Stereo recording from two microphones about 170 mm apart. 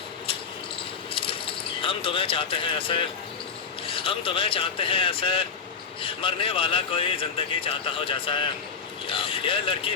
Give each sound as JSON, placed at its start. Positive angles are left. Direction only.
{"t": 1.1, "sound": "speech", "side_deg": 30}